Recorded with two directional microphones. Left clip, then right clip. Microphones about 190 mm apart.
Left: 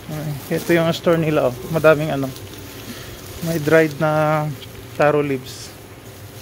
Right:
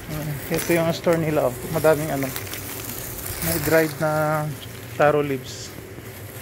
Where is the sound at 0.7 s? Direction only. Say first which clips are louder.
Left 4 dB; 45° left (ahead or behind).